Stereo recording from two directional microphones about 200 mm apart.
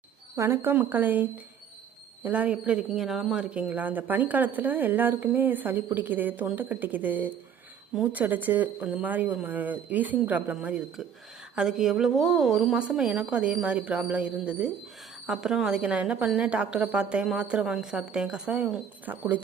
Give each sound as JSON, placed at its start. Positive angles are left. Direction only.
{"t": 0.3, "sound": "a man's voice", "side_deg": -10}